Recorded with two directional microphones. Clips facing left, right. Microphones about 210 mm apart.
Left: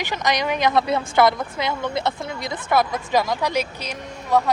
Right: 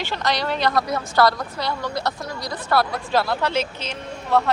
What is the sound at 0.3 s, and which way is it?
Speech, 15° left (ahead or behind).